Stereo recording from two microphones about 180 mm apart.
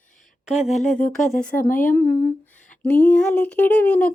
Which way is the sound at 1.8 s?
15° left (ahead or behind).